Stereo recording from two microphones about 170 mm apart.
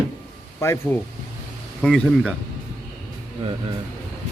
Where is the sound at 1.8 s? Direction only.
5° left (ahead or behind).